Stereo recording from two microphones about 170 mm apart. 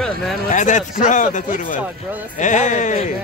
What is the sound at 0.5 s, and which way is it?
Speech, 45° left (ahead or behind).